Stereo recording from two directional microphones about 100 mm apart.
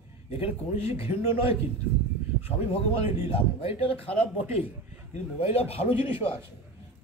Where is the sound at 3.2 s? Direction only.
70° left (ahead or behind).